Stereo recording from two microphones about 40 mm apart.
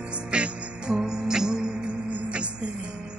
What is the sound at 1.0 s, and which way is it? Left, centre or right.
Music, centre.